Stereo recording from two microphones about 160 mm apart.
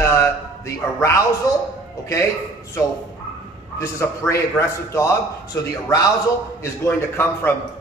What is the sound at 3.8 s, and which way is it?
A man's voice, 20° left (ahead or behind).